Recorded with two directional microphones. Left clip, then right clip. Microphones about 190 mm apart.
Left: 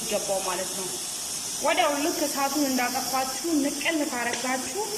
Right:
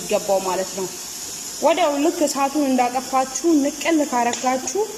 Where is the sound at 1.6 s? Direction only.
25° right (ahead or behind).